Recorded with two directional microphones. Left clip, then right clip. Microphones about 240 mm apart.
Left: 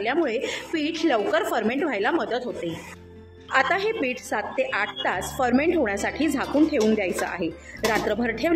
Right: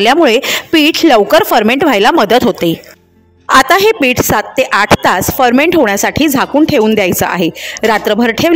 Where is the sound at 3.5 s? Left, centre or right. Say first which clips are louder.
Right 15 dB; right.